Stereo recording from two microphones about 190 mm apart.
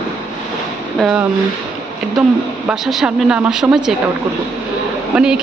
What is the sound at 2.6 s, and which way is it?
A woman's voice, centre (ahead or behind).